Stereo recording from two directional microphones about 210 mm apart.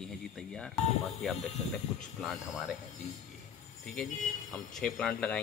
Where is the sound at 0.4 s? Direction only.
5° left (ahead or behind).